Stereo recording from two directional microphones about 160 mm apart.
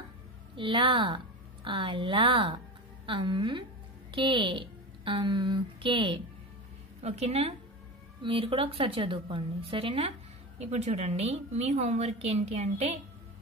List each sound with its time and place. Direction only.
0.6 s a woman's voice: 30° right (ahead or behind)